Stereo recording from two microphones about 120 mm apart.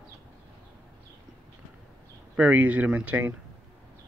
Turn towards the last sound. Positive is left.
turn(degrees=-10)  # may be behind; listen again after turning